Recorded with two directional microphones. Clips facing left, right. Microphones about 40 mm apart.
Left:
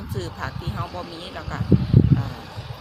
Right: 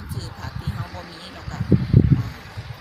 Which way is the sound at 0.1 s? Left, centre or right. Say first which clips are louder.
Left 5 dB; left.